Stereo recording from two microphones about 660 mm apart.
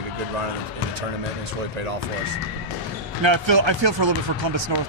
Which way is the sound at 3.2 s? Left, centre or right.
Right.